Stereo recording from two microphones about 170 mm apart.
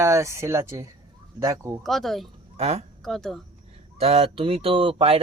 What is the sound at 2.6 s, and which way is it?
Speech, 40° right (ahead or behind).